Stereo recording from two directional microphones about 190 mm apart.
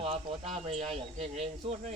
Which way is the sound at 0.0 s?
30° right (ahead or behind).